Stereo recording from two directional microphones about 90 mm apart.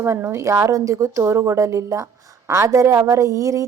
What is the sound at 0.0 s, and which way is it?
Speech, 30° right (ahead or behind).